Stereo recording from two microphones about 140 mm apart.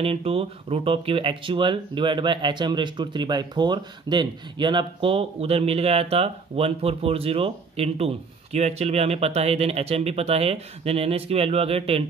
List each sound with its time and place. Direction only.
0.0 s speech: 45° right (ahead or behind)